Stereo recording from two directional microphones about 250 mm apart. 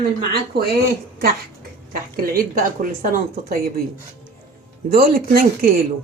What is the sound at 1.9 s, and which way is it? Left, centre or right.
Speech, right.